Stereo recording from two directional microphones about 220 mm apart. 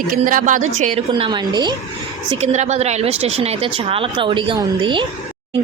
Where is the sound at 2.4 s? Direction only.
30° right (ahead or behind).